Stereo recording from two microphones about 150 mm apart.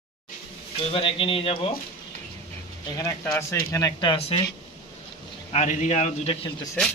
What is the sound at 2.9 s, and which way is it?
Speech, 20° left (ahead or behind).